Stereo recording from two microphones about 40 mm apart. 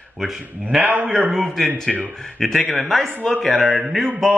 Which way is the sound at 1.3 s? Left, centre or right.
Centre.